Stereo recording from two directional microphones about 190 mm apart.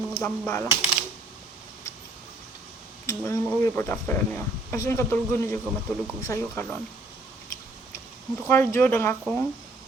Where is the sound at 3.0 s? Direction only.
15° left (ahead or behind).